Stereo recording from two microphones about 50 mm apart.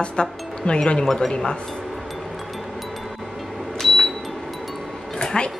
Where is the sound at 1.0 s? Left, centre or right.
Centre.